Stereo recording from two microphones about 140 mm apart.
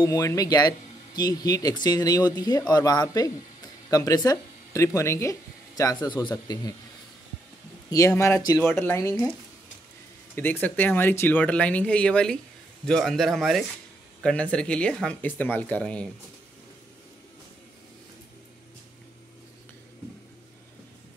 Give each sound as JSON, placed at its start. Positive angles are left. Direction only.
{"t": 0.0, "sound": "speech", "side_deg": 25}
{"t": 7.9, "sound": "speech", "side_deg": 20}
{"t": 10.3, "sound": "speech", "side_deg": 15}